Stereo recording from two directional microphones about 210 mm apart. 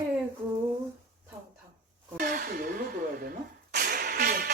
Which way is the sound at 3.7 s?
45° right (ahead or behind).